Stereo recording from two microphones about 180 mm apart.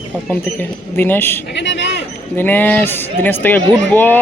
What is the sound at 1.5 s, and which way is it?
Speech, 80° left.